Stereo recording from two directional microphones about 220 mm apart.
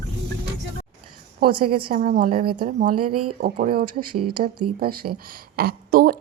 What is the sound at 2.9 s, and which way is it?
Speech, 90° right.